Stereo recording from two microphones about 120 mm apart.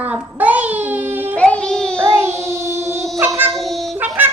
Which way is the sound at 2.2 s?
20° right (ahead or behind).